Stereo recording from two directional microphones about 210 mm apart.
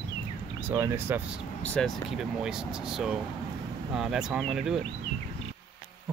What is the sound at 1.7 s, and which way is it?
Speech, centre (ahead or behind).